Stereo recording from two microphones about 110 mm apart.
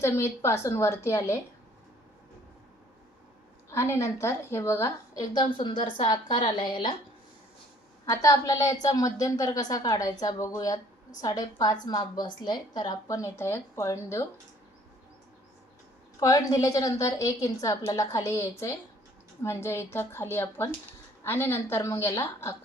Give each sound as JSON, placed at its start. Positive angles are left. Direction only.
{"t": 0.0, "sound": "a woman's voice", "side_deg": 25}
{"t": 3.7, "sound": "a woman's voice", "side_deg": 25}
{"t": 5.3, "sound": "a woman's voice", "side_deg": 50}
{"t": 8.1, "sound": "a woman's voice", "side_deg": 30}
{"t": 16.2, "sound": "a woman's voice", "side_deg": 35}